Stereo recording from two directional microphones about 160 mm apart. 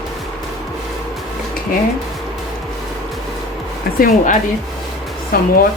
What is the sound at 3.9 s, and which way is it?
Speech, 65° left (ahead or behind).